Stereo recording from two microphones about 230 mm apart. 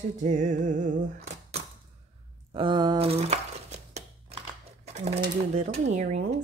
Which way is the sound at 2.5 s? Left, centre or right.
Centre.